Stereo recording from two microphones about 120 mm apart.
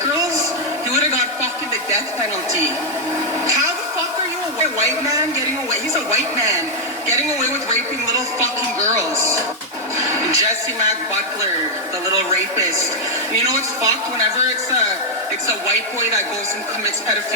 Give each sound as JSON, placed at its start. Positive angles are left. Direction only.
{"t": 6.1, "sound": "speech", "side_deg": -25}
{"t": 9.1, "sound": "speech", "side_deg": -25}
{"t": 10.0, "sound": "television", "side_deg": -30}
{"t": 13.4, "sound": "speech", "side_deg": -30}